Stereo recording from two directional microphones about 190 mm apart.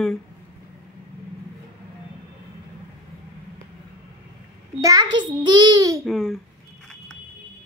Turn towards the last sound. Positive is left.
turn(degrees=0)  # may be behind; listen again after turning